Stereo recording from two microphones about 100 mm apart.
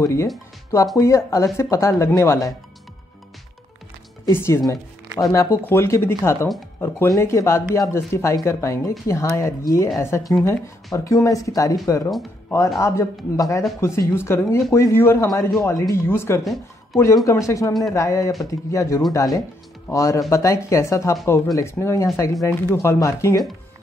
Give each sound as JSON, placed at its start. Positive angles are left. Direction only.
{"t": 0.0, "sound": "speech", "side_deg": 30}
{"t": 4.3, "sound": "speech", "side_deg": 25}